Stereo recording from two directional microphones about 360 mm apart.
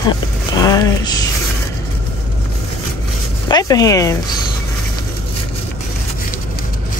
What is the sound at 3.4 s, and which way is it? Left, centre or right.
Speech, centre.